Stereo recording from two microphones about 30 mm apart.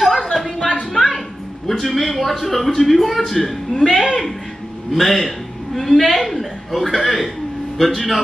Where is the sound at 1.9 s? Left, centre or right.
Centre.